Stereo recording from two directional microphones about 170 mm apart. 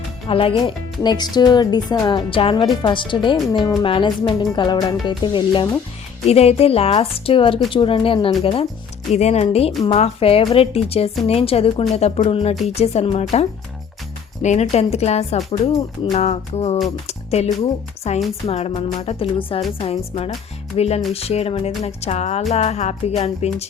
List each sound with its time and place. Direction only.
0.3 s speech: 30° left (ahead or behind)
14.4 s speech: 40° left (ahead or behind)